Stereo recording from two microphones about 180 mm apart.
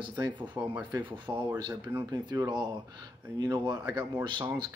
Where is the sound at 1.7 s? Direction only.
10° right (ahead or behind).